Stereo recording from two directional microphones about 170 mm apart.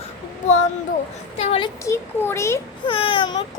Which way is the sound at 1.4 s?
35° left (ahead or behind).